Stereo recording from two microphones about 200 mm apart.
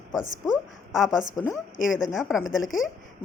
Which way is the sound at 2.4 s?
75° left (ahead or behind).